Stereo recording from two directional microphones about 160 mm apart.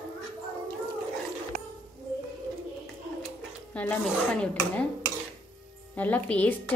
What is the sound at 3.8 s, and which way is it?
Speech, 5° left (ahead or behind).